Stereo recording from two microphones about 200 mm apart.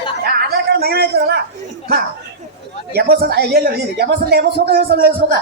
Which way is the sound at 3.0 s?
50° right (ahead or behind).